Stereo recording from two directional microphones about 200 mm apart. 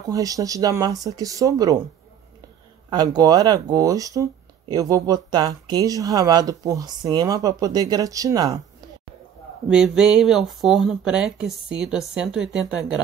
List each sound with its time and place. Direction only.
0.1 s speech: 15° right (ahead or behind)
2.9 s speech: 20° right (ahead or behind)
9.7 s speech: 5° right (ahead or behind)